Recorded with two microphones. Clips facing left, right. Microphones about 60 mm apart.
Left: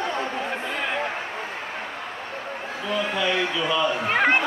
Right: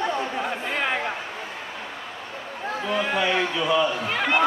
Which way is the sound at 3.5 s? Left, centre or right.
Centre.